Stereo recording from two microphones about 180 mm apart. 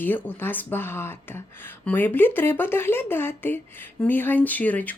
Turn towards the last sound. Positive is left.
turn(degrees=10)  # may be behind; listen again after turning